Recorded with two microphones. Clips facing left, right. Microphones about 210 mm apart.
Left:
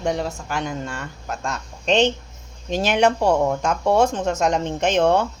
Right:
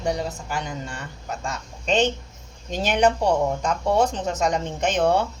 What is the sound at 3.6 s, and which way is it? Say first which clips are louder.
Speech: left 3 dB; 65° left (ahead or behind).